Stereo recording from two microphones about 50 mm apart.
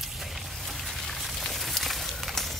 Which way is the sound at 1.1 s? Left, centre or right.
Centre.